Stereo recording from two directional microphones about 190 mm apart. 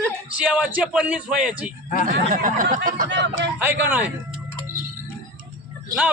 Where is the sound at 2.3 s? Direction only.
45° right (ahead or behind).